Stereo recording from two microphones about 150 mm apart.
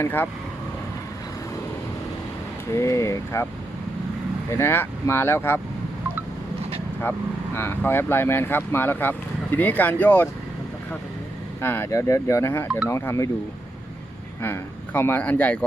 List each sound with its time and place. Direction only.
0.0 s speech: 10° left (ahead or behind)
2.7 s speech: 20° left (ahead or behind)
4.5 s speech: 15° left (ahead or behind)
7.0 s speech: 15° left (ahead or behind)
11.6 s speech: 15° left (ahead or behind)
14.4 s speech: 15° left (ahead or behind)